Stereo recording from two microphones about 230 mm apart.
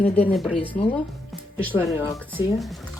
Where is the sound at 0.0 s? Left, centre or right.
Left.